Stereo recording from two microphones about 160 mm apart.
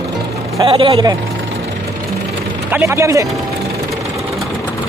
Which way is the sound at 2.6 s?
15° right (ahead or behind).